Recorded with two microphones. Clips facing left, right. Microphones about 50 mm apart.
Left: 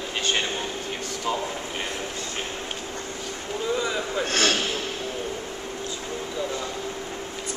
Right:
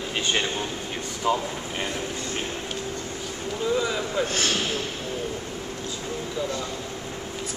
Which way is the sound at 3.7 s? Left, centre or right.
Centre.